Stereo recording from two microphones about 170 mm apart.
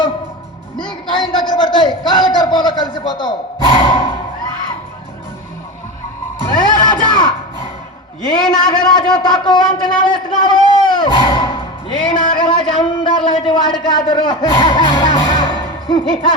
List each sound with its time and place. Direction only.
0.8 s a man's voice: 30° left (ahead or behind)
6.4 s crowd: 25° left (ahead or behind)
8.3 s a man's voice: 30° left (ahead or behind)
10.7 s music: 25° left (ahead or behind)
12.1 s a man's voice: 30° left (ahead or behind)